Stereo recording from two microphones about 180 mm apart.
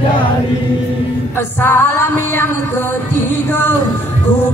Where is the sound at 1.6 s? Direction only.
10° left (ahead or behind).